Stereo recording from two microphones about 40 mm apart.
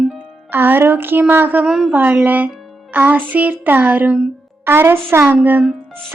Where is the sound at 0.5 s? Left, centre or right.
Right.